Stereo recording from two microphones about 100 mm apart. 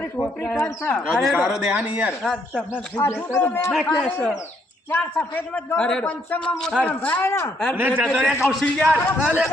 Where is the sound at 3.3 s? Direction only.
20° left (ahead or behind).